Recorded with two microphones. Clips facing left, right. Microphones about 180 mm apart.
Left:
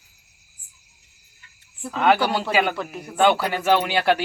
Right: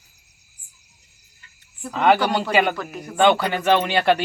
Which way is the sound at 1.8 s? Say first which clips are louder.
Right 1 dB; centre (ahead or behind).